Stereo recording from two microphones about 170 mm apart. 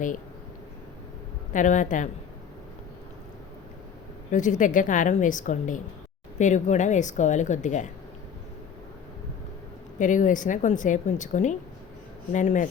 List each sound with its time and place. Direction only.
1.5 s a woman's voice: 50° left (ahead or behind)
4.3 s a woman's voice: 50° left (ahead or behind)
10.0 s a woman's voice: 50° left (ahead or behind)